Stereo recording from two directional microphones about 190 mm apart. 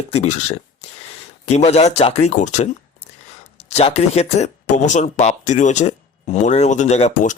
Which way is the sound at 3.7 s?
35° left (ahead or behind).